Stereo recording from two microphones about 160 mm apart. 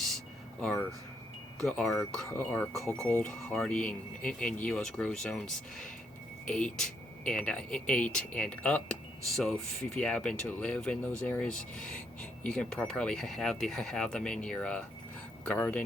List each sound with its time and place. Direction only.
0.6 s speech: 5° left (ahead or behind)